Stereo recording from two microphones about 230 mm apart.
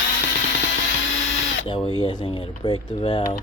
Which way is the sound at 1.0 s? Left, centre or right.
Left.